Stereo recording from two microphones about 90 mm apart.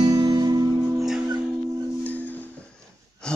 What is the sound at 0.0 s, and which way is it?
Music, 50° right (ahead or behind).